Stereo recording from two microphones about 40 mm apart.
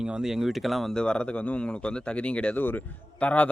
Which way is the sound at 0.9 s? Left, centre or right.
Left.